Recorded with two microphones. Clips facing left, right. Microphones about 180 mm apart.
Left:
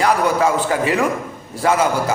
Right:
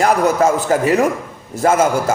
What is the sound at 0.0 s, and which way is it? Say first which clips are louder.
A man's voice: right 2 dB; 45° right (ahead or behind).